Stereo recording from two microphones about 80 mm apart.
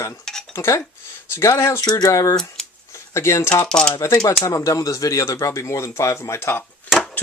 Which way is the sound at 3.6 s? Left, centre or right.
Centre.